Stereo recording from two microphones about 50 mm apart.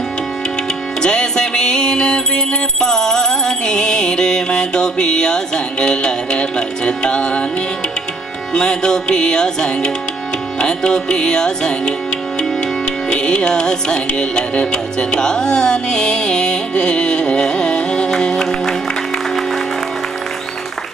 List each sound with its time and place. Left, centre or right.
1.0 s music: centre
8.5 s music: centre
13.1 s music: centre